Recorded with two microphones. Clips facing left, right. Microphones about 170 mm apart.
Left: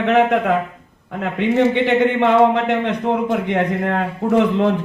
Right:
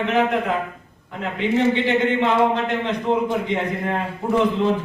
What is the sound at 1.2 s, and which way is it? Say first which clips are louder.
A man's voice: left 3 dB; 60° left (ahead or behind).